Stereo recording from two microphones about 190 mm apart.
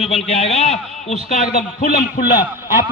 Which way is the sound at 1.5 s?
50° left (ahead or behind).